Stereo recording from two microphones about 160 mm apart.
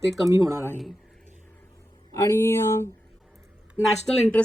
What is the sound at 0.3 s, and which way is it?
Speech, 20° right (ahead or behind).